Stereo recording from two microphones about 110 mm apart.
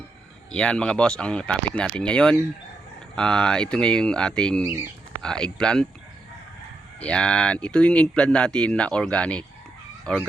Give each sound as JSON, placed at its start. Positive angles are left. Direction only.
{"t": 0.5, "sound": "speech", "side_deg": 10}
{"t": 4.6, "sound": "speech", "side_deg": -20}
{"t": 5.2, "sound": "speech", "side_deg": 5}
{"t": 7.0, "sound": "speech", "side_deg": 10}